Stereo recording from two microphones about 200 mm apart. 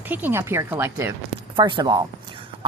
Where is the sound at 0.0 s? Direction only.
10° right (ahead or behind).